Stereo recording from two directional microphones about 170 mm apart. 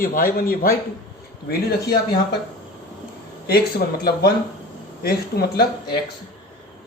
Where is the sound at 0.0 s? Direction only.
55° left (ahead or behind).